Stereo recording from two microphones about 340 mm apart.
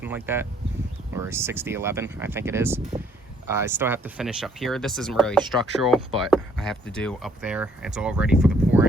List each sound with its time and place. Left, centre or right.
0.0 s speech: centre